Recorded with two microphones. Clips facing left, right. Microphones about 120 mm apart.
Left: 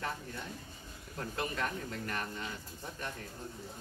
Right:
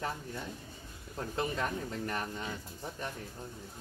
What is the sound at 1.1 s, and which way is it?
Speech, 20° right (ahead or behind).